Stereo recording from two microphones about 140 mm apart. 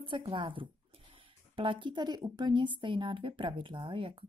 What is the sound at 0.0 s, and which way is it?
Speech, 40° right (ahead or behind).